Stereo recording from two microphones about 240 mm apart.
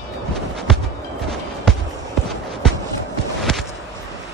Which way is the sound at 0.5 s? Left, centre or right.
Centre.